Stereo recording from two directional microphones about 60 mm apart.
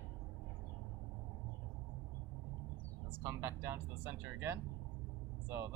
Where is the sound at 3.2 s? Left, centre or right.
Right.